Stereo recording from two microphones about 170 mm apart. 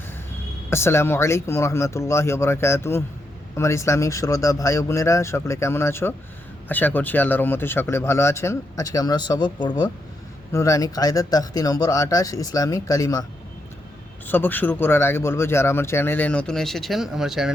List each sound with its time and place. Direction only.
0.7 s speech: 15° left (ahead or behind)
14.3 s speech: 10° left (ahead or behind)